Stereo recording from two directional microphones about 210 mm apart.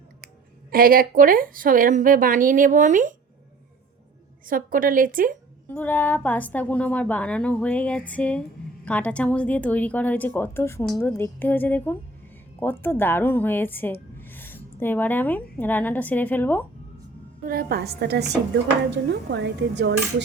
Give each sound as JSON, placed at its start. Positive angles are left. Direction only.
{"t": 0.7, "sound": "a woman's voice", "side_deg": -45}
{"t": 4.4, "sound": "a woman's voice", "side_deg": -40}
{"t": 5.6, "sound": "a woman's voice", "side_deg": 10}
{"t": 17.4, "sound": "a woman's voice", "side_deg": -45}
{"t": 18.9, "sound": "dishes", "side_deg": -55}